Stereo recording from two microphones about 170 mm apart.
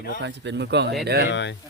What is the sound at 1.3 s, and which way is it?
Speech, 90° left.